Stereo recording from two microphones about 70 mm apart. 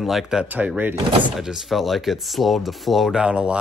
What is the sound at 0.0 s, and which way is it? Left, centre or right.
Speech, centre.